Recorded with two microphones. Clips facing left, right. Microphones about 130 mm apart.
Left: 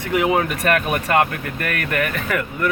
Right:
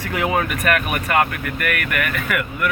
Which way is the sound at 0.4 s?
30° left (ahead or behind).